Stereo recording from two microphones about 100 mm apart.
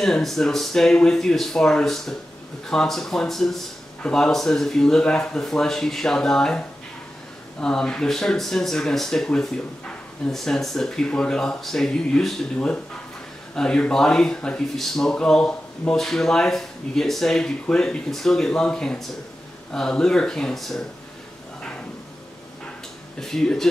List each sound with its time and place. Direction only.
0.0 s speech: centre (ahead or behind)
7.6 s speech: 5° left (ahead or behind)
23.2 s speech: 5° left (ahead or behind)